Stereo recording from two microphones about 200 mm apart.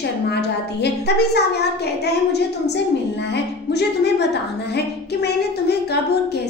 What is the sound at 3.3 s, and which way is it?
Music, 55° left (ahead or behind).